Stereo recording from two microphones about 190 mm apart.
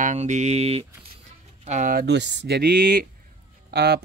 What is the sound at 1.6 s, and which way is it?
Speech, 40° right (ahead or behind).